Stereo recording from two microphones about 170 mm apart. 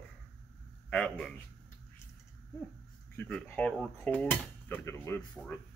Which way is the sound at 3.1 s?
10° left (ahead or behind).